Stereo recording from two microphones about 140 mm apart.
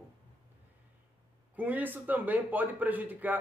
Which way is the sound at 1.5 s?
10° right (ahead or behind).